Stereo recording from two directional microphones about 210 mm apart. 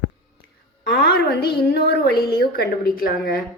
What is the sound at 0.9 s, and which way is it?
A woman's voice, 50° left (ahead or behind).